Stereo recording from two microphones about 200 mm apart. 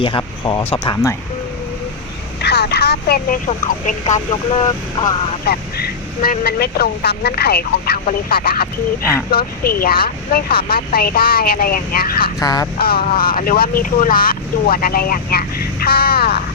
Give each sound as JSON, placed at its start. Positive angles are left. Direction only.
{"t": 0.0, "sound": "speech", "side_deg": 25}
{"t": 2.4, "sound": "speech", "side_deg": 55}
{"t": 5.5, "sound": "speech", "side_deg": 50}
{"t": 12.4, "sound": "speech", "side_deg": 20}
{"t": 12.8, "sound": "speech", "side_deg": 45}